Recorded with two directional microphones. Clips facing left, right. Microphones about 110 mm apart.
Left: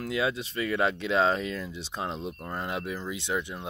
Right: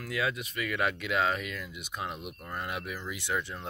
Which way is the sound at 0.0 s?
25° left (ahead or behind).